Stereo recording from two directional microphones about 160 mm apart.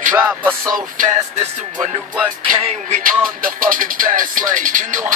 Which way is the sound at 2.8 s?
55° right (ahead or behind).